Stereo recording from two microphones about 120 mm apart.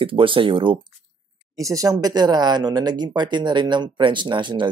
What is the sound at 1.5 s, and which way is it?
Speech, 30° right (ahead or behind).